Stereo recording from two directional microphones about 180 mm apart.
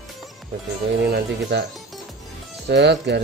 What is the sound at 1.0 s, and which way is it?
Speech, 65° right (ahead or behind).